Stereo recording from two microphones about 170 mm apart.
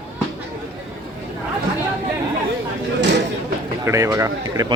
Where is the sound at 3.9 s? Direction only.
20° right (ahead or behind).